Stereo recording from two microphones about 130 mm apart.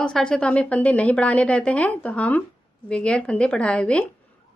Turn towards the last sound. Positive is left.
turn(degrees=10)  # may be behind; listen again after turning